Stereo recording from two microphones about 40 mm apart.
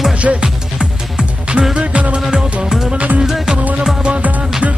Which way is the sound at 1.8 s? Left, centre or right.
Right.